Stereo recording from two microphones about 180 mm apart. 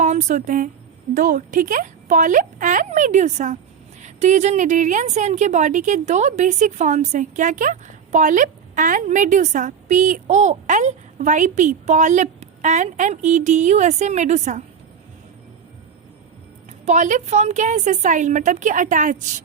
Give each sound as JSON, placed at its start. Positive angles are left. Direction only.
{"t": 0.0, "sound": "a woman's voice", "side_deg": -40}
{"t": 16.8, "sound": "a woman's voice", "side_deg": -40}